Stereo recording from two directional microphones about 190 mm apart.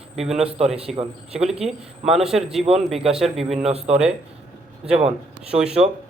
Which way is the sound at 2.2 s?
Centre (ahead or behind).